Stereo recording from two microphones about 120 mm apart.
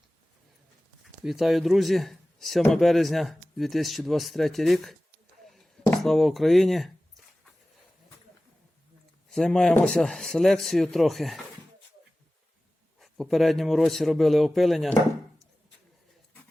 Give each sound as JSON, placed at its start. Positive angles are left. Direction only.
{"t": 1.2, "sound": "speech", "side_deg": 0}
{"t": 6.0, "sound": "speech", "side_deg": 0}
{"t": 9.3, "sound": "speech", "side_deg": 5}
{"t": 13.0, "sound": "speech", "side_deg": 0}